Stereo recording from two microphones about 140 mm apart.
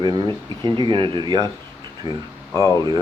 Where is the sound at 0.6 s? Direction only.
35° right (ahead or behind).